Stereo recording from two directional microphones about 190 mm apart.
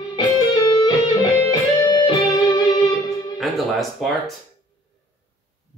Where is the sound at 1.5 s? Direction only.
20° left (ahead or behind).